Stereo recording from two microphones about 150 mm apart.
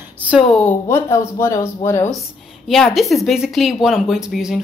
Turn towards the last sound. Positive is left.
turn(degrees=-5)  # may be behind; listen again after turning